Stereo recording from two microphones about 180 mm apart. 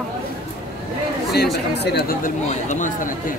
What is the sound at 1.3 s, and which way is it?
Speech, 65° left (ahead or behind).